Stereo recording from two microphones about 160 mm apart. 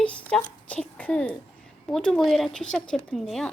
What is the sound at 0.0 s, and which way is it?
A woman's voice, 5° left (ahead or behind).